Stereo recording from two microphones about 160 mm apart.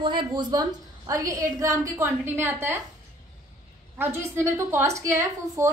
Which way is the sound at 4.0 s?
15° right (ahead or behind).